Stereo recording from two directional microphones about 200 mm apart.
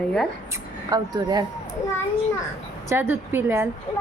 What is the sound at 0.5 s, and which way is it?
Speech, 20° right (ahead or behind).